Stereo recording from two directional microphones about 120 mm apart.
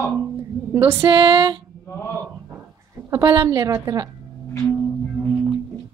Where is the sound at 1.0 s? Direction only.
40° right (ahead or behind).